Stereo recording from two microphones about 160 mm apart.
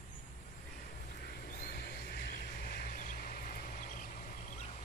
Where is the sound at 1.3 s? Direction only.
65° left (ahead or behind).